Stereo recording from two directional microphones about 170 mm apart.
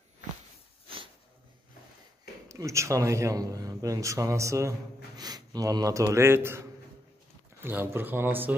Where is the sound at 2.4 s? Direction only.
20° right (ahead or behind).